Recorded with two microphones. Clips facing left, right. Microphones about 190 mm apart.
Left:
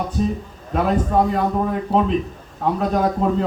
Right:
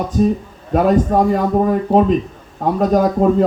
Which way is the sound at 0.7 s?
45° right (ahead or behind).